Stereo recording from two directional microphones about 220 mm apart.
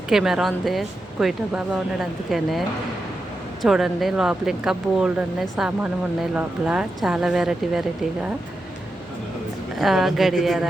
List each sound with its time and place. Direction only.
0.1 s speech: 5° right (ahead or behind)
9.7 s speech: centre (ahead or behind)